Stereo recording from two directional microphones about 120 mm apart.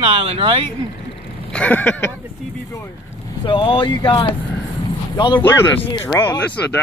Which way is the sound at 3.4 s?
45° left (ahead or behind).